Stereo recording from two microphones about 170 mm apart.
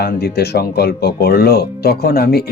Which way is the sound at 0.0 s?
70° left (ahead or behind).